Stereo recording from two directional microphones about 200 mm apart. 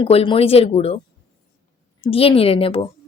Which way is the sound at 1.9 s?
25° left (ahead or behind).